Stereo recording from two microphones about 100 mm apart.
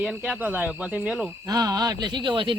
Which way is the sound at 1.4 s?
40° right (ahead or behind).